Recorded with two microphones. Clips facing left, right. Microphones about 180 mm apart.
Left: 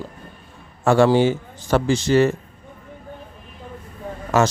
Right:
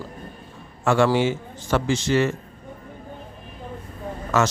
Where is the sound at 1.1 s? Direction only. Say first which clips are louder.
Left 4 dB; 35° left (ahead or behind).